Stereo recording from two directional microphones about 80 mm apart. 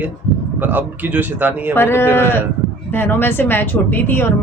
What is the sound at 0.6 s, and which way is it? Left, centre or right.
Speech, right.